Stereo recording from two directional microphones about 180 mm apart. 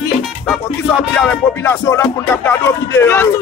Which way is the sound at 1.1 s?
10° left (ahead or behind).